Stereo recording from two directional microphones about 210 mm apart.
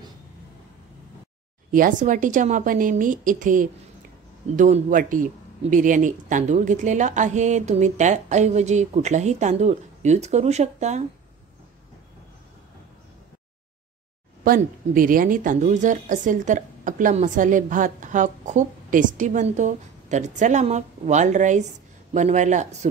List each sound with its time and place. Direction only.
1.7 s speech: 40° right (ahead or behind)
14.4 s speech: 40° right (ahead or behind)